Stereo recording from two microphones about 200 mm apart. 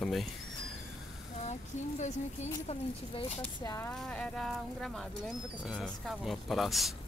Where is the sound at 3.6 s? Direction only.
15° left (ahead or behind).